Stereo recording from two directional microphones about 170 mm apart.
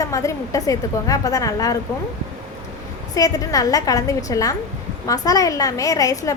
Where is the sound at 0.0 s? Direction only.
20° left (ahead or behind).